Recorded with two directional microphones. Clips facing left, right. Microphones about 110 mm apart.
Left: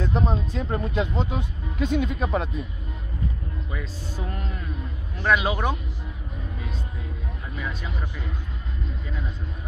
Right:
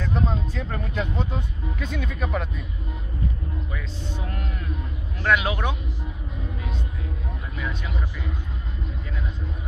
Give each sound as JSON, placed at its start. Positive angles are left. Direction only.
{"t": 0.0, "sound": "speech", "side_deg": 20}
{"t": 3.7, "sound": "speech", "side_deg": 10}
{"t": 7.5, "sound": "speech", "side_deg": 10}